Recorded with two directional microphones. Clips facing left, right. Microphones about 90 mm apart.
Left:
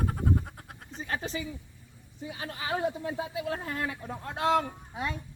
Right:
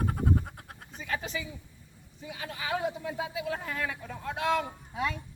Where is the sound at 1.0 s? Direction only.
35° left (ahead or behind).